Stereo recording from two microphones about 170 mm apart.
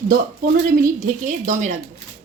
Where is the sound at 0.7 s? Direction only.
50° right (ahead or behind).